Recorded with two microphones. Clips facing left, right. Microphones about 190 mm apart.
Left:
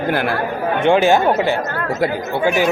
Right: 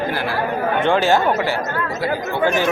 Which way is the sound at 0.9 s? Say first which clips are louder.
Left 4 dB; 15° left (ahead or behind).